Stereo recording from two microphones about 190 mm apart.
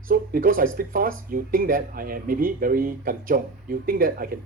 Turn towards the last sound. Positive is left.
turn(degrees=-50)  # may be behind; listen again after turning